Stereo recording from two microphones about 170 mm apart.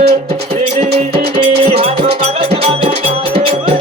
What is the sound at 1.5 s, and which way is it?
Music, 70° right (ahead or behind).